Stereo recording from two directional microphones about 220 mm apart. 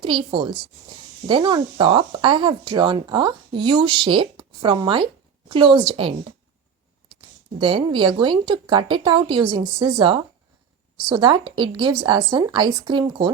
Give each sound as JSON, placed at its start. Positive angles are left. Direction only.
{"t": 0.0, "sound": "speech", "side_deg": -20}
{"t": 7.6, "sound": "speech", "side_deg": -20}